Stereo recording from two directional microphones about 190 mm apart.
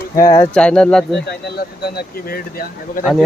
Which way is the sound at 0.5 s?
5° left (ahead or behind).